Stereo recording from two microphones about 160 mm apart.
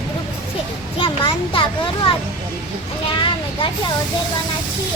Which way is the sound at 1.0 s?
30° left (ahead or behind).